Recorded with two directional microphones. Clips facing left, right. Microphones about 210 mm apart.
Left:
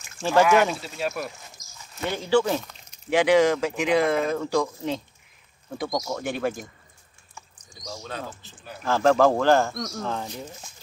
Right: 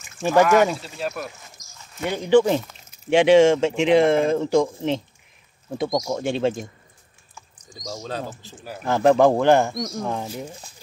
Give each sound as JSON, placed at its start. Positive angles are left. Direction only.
{"t": 0.2, "sound": "speech", "side_deg": -15}
{"t": 0.5, "sound": "speech", "side_deg": 0}
{"t": 2.0, "sound": "speech", "side_deg": -15}
{"t": 7.9, "sound": "speech", "side_deg": -40}
{"t": 8.8, "sound": "speech", "side_deg": -20}